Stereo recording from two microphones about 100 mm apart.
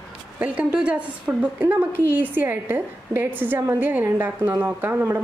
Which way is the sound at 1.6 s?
20° right (ahead or behind).